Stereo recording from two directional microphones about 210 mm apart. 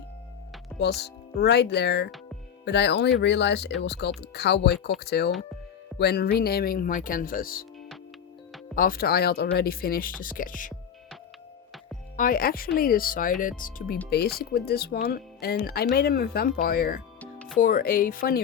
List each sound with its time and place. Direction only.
0.8 s speech: 50° left (ahead or behind)
8.7 s speech: 45° left (ahead or behind)
12.1 s speech: 40° left (ahead or behind)
17.2 s music: 5° left (ahead or behind)
17.6 s speech: 45° left (ahead or behind)